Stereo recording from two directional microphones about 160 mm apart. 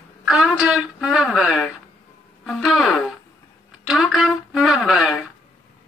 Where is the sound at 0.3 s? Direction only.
Centre (ahead or behind).